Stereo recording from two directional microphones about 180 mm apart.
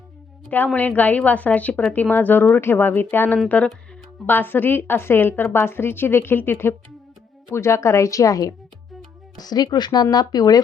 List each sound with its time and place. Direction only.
0.4 s speech: 5° left (ahead or behind)